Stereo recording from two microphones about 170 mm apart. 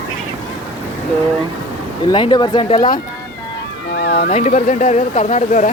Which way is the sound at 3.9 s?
75° left (ahead or behind).